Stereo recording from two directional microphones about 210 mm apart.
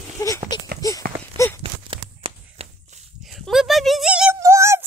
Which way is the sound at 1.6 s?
25° right (ahead or behind).